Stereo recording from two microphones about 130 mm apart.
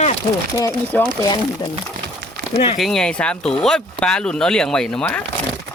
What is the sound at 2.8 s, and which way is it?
Speech, 5° left (ahead or behind).